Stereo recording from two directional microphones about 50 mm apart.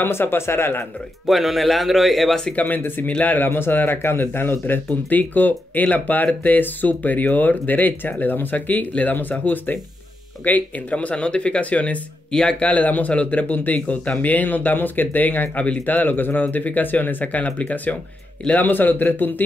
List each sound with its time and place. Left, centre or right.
0.0 s speech: left
1.2 s speech: centre
2.5 s speech: left
3.4 s speech: left